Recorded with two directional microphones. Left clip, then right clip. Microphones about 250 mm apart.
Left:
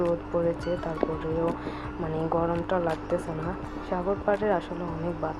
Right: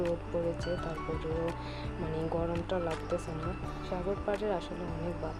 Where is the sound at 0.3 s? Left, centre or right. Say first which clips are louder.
Left 7 dB; centre.